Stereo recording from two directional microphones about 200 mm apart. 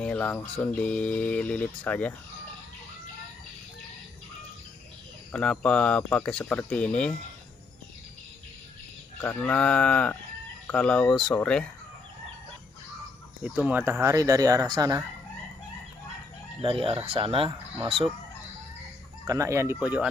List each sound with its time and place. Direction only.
0.0 s speech: 5° left (ahead or behind)
5.3 s speech: 5° left (ahead or behind)
9.2 s speech: 10° left (ahead or behind)
13.4 s speech: 5° right (ahead or behind)
16.6 s speech: 25° right (ahead or behind)
19.2 s speech: 15° right (ahead or behind)